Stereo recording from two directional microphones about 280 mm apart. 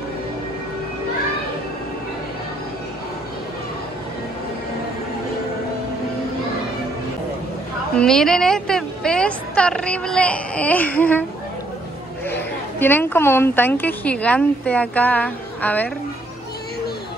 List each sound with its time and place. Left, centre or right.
7.9 s a woman's voice: centre
12.3 s a woman's voice: centre